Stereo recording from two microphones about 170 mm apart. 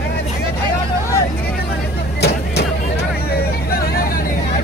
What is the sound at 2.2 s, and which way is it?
Vehicle, 75° left (ahead or behind).